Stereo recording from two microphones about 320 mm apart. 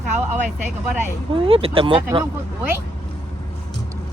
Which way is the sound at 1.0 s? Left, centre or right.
Centre.